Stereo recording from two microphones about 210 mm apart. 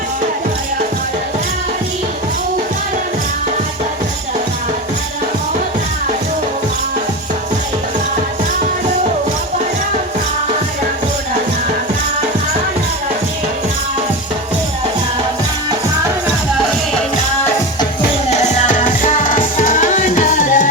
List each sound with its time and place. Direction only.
18.3 s music: 35° left (ahead or behind)